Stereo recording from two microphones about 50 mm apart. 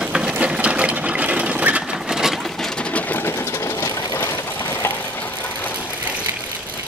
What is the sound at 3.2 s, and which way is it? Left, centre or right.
Sewing machine, left.